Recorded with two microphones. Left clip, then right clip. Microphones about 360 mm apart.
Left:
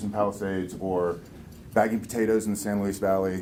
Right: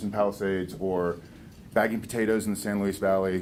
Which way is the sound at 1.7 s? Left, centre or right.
Right.